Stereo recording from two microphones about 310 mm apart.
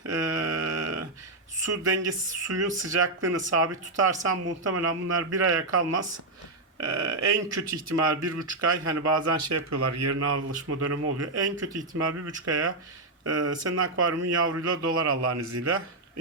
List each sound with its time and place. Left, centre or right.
0.0 s a sound: right
1.6 s speech: right
4.4 s speech: right
15.3 s speech: right